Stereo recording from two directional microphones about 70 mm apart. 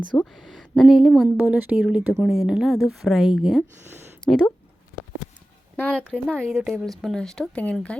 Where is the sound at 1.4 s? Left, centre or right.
Right.